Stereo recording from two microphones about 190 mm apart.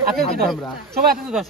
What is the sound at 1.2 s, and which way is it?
Speech, centre (ahead or behind).